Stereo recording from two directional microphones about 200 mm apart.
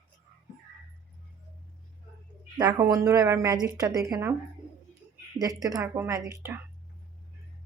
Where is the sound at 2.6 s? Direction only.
20° right (ahead or behind).